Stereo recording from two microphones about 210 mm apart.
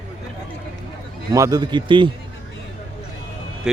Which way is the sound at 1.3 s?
15° right (ahead or behind).